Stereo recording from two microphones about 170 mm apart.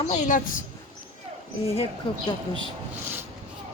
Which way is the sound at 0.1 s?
45° left (ahead or behind).